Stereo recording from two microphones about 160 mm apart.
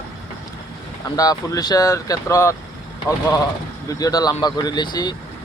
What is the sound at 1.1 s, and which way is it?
Speech, 20° left (ahead or behind).